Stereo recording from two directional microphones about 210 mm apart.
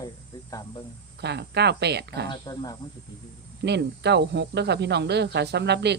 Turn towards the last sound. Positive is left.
turn(degrees=-55)  # may be behind; listen again after turning